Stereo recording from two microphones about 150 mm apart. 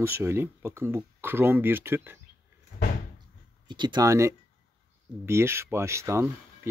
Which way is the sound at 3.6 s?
30° right (ahead or behind).